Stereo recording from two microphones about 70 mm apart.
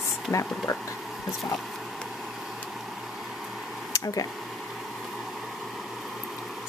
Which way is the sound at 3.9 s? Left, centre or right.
Left.